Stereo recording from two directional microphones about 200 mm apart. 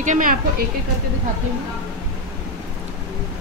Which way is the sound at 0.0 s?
40° right (ahead or behind).